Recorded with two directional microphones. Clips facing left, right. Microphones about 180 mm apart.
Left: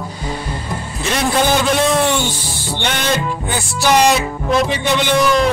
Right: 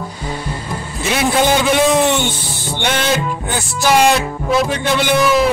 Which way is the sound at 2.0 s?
20° right (ahead or behind).